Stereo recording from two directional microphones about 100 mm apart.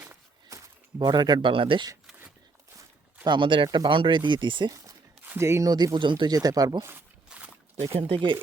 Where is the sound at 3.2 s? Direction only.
50° right (ahead or behind).